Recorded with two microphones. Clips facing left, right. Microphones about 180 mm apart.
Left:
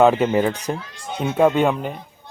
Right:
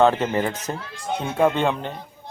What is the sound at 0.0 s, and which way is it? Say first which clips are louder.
A man's voice: left 3 dB; 10° left (ahead or behind).